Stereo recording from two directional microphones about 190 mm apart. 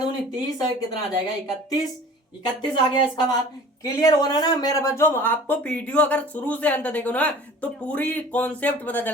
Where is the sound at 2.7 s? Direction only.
25° left (ahead or behind).